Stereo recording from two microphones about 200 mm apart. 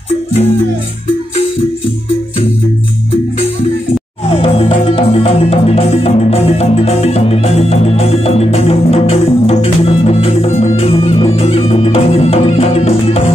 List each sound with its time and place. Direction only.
4.3 s music: 25° left (ahead or behind)